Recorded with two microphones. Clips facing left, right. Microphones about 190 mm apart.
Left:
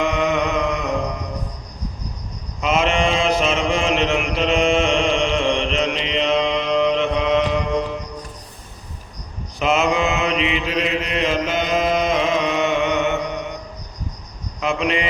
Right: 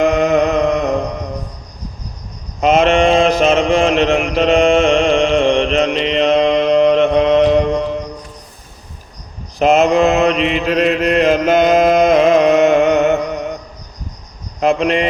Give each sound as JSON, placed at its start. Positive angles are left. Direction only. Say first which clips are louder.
{"t": 0.0, "sound": "a sound", "louder": "right 7 dB", "side_deg": -45}
{"t": 2.6, "sound": "mantra", "louder": "right 7 dB", "side_deg": -40}
{"t": 9.6, "sound": "mantra", "louder": "right 7 dB", "side_deg": -40}
{"t": 10.4, "sound": "chant", "louder": "right 7 dB", "side_deg": -45}
{"t": 14.6, "sound": "cricket", "louder": "right 7 dB", "side_deg": -40}